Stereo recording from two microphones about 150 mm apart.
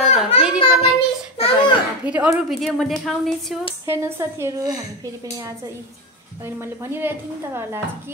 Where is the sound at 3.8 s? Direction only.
15° right (ahead or behind).